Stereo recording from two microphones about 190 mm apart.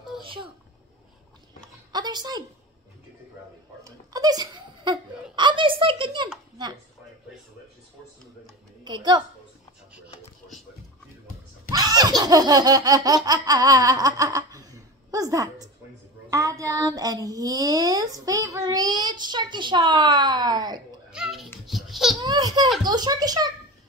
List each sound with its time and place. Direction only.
0.2 s a sound: 25° right (ahead or behind)
1.9 s a woman's voice: 20° right (ahead or behind)
3.8 s giggle: 20° right (ahead or behind)
8.8 s a child's voice: 25° right (ahead or behind)
11.7 s laughter: 20° right (ahead or behind)
16.3 s child singing: 15° right (ahead or behind)
21.1 s a sound: 5° right (ahead or behind)
21.6 s babbling: centre (ahead or behind)
22.2 s baby laughter: 20° right (ahead or behind)
22.8 s child singing: 20° right (ahead or behind)